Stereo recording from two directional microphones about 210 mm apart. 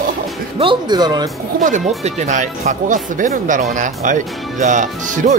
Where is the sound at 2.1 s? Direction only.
35° right (ahead or behind).